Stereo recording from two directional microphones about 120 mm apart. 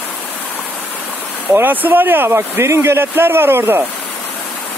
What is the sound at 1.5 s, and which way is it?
Speech, 15° right (ahead or behind).